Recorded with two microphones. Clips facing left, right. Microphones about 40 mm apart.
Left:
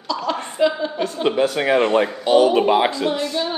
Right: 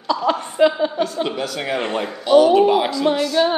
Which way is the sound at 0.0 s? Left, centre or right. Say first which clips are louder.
Right 4 dB; right.